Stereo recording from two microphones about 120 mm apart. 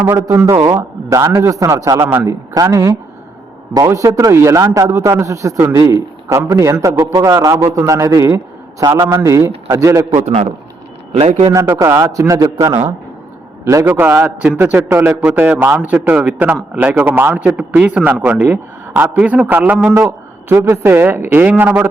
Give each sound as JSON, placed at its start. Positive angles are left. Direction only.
{"t": 0.0, "sound": "a man's voice", "side_deg": -15}
{"t": 10.2, "sound": "a man's voice", "side_deg": -65}
{"t": 11.5, "sound": "a man's voice", "side_deg": -20}
{"t": 13.8, "sound": "a man's voice", "side_deg": -20}
{"t": 20.0, "sound": "a man's voice", "side_deg": -20}